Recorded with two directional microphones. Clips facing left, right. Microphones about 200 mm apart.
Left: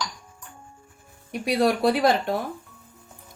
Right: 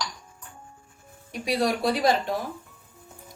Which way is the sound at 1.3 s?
60° left (ahead or behind).